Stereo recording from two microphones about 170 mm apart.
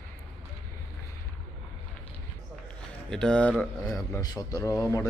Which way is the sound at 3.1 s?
5° left (ahead or behind).